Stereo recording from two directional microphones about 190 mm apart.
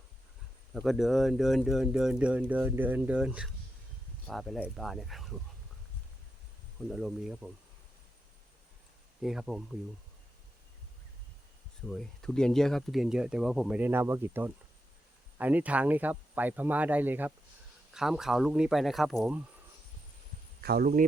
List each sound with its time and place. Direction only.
0.7 s speech: centre (ahead or behind)
6.9 s speech: centre (ahead or behind)
9.2 s speech: centre (ahead or behind)
11.9 s speech: centre (ahead or behind)
20.6 s speech: 55° right (ahead or behind)